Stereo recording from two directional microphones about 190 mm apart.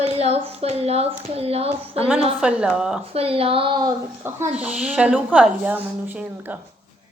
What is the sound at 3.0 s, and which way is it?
Speech, 30° right (ahead or behind).